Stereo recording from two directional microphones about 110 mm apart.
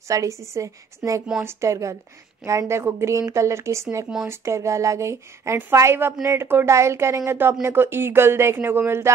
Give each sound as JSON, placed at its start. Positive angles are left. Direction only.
{"t": 0.1, "sound": "speech", "side_deg": -30}